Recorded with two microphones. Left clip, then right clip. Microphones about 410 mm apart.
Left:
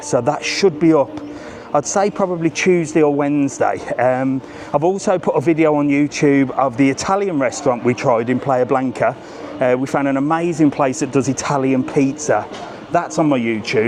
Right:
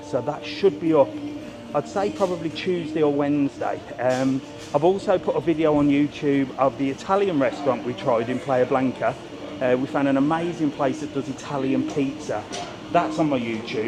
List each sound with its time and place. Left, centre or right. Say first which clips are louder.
0.1 s a man's voice: left 9 dB; left